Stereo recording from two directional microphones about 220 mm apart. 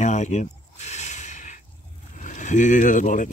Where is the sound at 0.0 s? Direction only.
30° left (ahead or behind).